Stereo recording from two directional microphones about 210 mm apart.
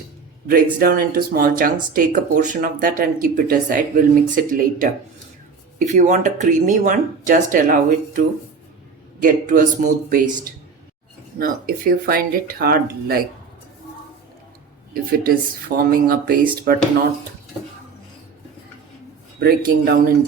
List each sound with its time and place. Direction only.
0.4 s speech: 45° right (ahead or behind)
9.2 s speech: 40° right (ahead or behind)
11.3 s speech: 45° right (ahead or behind)
14.9 s speech: 45° right (ahead or behind)
19.4 s speech: 45° right (ahead or behind)